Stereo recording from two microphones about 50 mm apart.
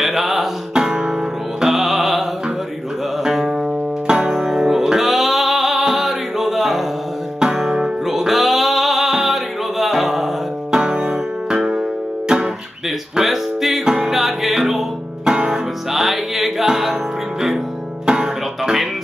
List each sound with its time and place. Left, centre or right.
0.0 s music: centre
3.3 s music: centre
10.8 s music: centre
13.1 s music: centre
15.3 s music: centre
15.9 s music: centre
18.0 s music: centre